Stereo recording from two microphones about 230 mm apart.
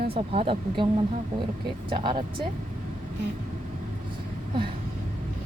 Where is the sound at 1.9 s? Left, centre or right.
Right.